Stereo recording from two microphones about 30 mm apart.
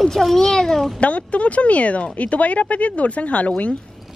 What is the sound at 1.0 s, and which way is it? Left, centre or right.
Speech, left.